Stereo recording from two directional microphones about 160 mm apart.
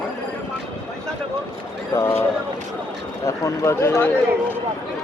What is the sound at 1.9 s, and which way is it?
Speech, 15° left (ahead or behind).